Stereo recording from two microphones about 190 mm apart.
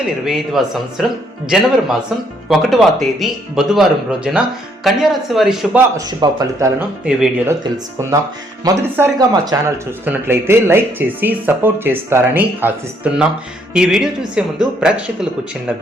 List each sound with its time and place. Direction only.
0.3 s speech: centre (ahead or behind)
2.5 s speech: centre (ahead or behind)
6.1 s speech: 20° right (ahead or behind)
8.6 s speech: 15° right (ahead or behind)